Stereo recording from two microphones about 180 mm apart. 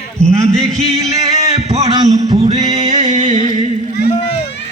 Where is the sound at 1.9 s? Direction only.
20° right (ahead or behind).